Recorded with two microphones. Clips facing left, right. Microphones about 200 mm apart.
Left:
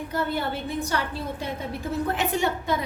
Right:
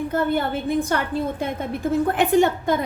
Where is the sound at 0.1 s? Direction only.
50° right (ahead or behind).